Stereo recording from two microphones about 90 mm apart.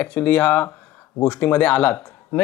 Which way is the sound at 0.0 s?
15° left (ahead or behind).